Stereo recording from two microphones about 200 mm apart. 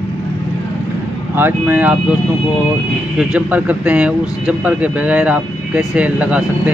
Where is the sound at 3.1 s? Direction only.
5° right (ahead or behind).